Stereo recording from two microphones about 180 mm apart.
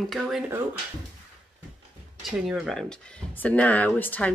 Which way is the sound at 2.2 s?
5° right (ahead or behind).